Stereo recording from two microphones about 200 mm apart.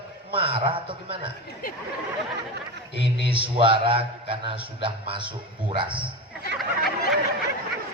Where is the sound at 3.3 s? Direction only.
25° right (ahead or behind).